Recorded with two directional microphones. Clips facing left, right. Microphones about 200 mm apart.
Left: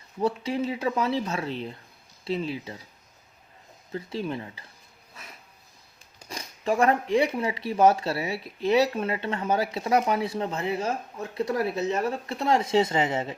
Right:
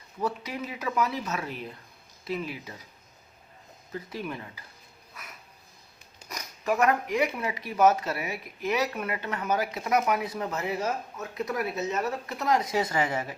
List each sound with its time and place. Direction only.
0.2 s speech: 30° left (ahead or behind)
3.9 s speech: 25° left (ahead or behind)
5.1 s a sound: 30° left (ahead or behind)
6.2 s speech: 30° left (ahead or behind)